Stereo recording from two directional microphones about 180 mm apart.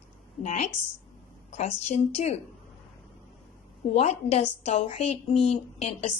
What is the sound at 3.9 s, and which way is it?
A woman's voice, 35° left (ahead or behind).